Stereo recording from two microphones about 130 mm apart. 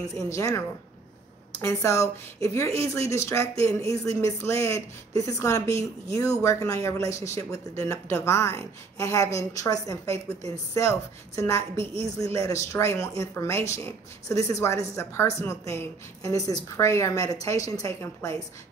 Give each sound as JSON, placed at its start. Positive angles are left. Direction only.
{"t": 0.3, "sound": "speech", "side_deg": 20}
{"t": 11.8, "sound": "a woman's voice", "side_deg": -45}
{"t": 12.2, "sound": "speech", "side_deg": 25}